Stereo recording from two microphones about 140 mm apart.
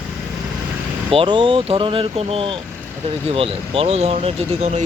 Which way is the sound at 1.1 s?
35° right (ahead or behind).